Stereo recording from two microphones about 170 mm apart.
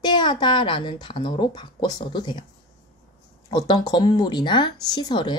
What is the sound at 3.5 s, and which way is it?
Speech, 25° left (ahead or behind).